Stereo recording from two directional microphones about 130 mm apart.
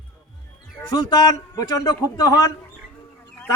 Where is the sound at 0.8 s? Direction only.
35° left (ahead or behind).